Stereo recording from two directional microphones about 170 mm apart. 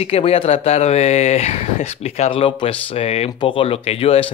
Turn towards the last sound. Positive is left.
turn(degrees=35)  # may be behind; listen again after turning